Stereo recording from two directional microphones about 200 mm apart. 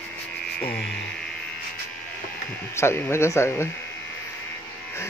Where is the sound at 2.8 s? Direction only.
10° left (ahead or behind).